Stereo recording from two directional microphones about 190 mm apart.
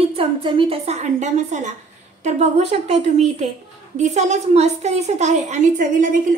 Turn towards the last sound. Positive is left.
turn(degrees=-40)  # may be behind; listen again after turning